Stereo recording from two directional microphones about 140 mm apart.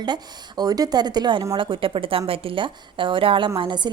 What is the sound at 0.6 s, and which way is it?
A woman's voice, 30° right (ahead or behind).